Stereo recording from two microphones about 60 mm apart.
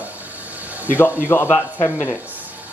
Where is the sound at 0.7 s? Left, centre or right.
Right.